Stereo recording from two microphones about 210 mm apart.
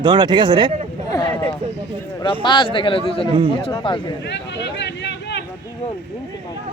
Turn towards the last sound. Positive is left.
turn(degrees=55)  # may be behind; listen again after turning